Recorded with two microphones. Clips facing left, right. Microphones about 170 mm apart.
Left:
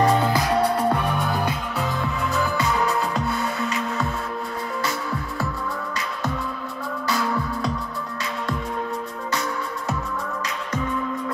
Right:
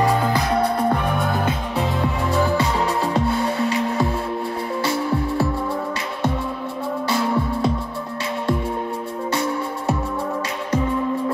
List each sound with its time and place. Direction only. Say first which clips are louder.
0.3 s music: right 1 dB; 5° left (ahead or behind)
1.0 s music: right 2 dB; 20° right (ahead or behind)
7.1 s music: right 3 dB; 25° right (ahead or behind)
9.3 s music: right 4 dB; 30° right (ahead or behind)